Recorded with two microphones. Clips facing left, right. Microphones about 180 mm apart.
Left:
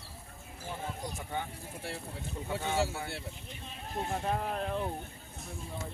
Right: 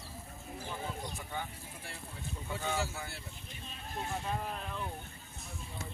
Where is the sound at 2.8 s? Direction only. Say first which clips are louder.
Left 6 dB; 65° left (ahead or behind).